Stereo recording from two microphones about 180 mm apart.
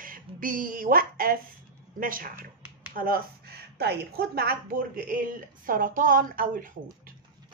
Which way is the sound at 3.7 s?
65° right (ahead or behind).